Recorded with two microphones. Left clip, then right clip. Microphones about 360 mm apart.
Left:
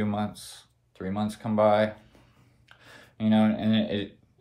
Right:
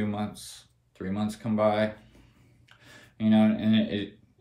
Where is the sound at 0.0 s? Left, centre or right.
Centre.